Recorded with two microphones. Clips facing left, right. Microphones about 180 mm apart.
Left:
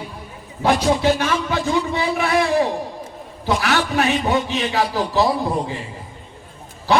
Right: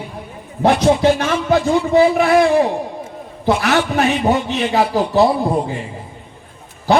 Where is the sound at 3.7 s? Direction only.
35° right (ahead or behind).